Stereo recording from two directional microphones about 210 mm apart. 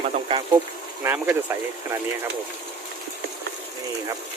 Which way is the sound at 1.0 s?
10° right (ahead or behind).